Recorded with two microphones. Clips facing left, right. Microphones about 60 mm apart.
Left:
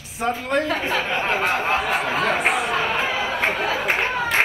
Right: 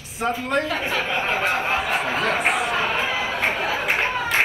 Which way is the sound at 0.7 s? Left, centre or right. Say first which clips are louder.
Left 1 dB; left.